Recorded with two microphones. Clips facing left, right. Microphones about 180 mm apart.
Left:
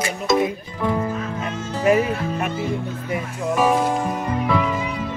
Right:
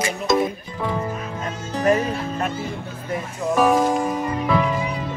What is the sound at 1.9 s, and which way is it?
Music, 10° left (ahead or behind).